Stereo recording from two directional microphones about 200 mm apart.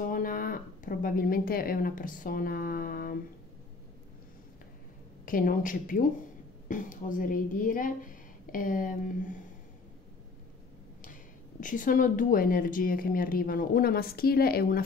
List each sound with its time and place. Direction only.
0.0 s speech: 45° left (ahead or behind)
5.2 s speech: 45° left (ahead or behind)
11.6 s speech: 40° left (ahead or behind)